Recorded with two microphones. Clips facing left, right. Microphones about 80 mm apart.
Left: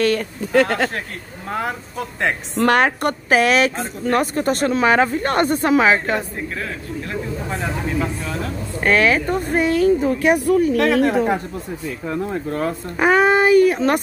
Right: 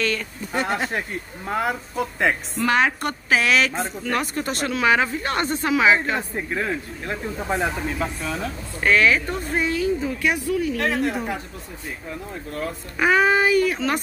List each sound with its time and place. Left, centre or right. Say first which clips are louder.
0.0 s speech: left 7 dB; left
0.5 s speech: left 7 dB; left
1.5 s speech: even; centre
2.5 s speech: left 9 dB; left
6.5 s speech: right 1 dB; right
8.0 s speech: left 2 dB; centre
8.8 s speech: left 2 dB; left
12.4 s speech: left 7 dB; left